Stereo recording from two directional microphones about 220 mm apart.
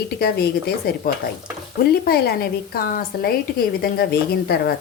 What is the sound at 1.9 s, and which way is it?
A woman's voice, 45° left (ahead or behind).